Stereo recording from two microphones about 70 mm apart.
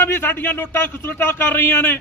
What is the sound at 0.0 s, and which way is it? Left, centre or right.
A man's voice, left.